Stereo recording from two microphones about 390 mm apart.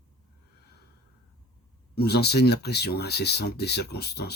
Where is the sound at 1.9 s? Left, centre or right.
Left.